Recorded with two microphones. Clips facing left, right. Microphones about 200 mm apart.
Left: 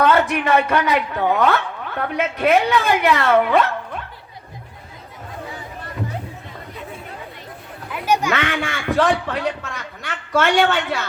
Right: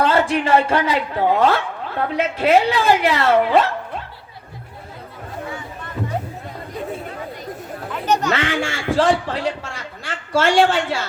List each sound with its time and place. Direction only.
0.0 s a man's voice: 30° right (ahead or behind)
7.9 s a sound: 10° left (ahead or behind)
8.3 s a man's voice: 30° right (ahead or behind)